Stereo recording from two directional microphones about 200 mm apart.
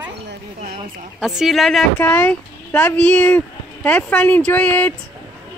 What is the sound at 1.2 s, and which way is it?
Speech, centre (ahead or behind).